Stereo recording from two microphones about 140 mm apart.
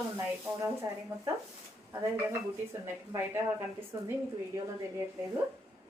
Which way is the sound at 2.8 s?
20° right (ahead or behind).